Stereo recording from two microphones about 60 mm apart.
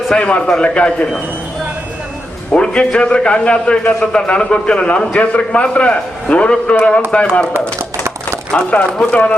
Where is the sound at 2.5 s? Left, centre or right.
Centre.